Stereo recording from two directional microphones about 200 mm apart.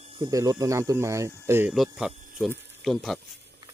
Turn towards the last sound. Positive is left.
turn(degrees=0)  # may be behind; listen again after turning